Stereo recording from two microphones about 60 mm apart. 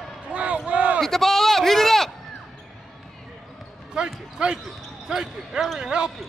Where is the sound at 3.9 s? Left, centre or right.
Centre.